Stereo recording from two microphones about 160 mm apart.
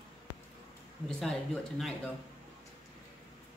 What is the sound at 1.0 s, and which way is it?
Speech, 5° left (ahead or behind).